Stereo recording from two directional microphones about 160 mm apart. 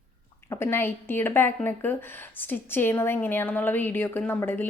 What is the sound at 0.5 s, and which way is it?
A woman's voice, 15° left (ahead or behind).